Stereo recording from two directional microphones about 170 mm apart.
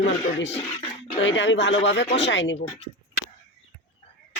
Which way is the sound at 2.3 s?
90° left.